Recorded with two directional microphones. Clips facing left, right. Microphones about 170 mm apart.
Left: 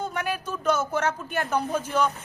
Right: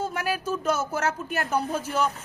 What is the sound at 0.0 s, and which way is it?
A woman's voice, 5° right (ahead or behind).